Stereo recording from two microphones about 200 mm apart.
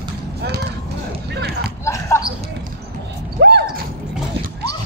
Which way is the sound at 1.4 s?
55° right (ahead or behind).